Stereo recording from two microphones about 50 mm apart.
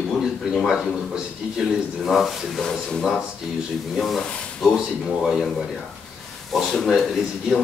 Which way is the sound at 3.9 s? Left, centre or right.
Centre.